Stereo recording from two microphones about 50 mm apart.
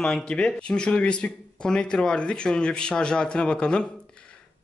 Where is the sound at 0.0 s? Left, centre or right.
Centre.